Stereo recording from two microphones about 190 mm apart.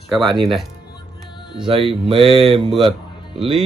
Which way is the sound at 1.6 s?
30° right (ahead or behind).